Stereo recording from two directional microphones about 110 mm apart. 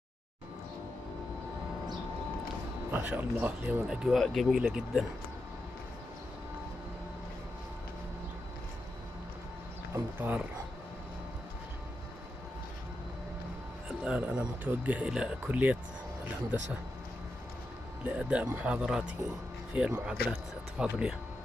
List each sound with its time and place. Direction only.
2.9 s speech: 15° right (ahead or behind)
3.8 s speech: 5° right (ahead or behind)
9.9 s speech: 20° right (ahead or behind)
14.0 s speech: 10° right (ahead or behind)
18.0 s speech: 10° right (ahead or behind)